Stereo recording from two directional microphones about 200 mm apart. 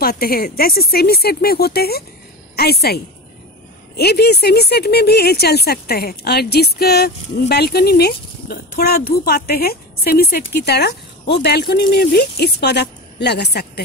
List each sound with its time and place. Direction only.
0.0 s a woman's voice: 50° left (ahead or behind)